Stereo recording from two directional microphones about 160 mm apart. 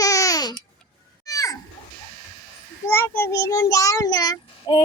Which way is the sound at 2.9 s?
15° left (ahead or behind).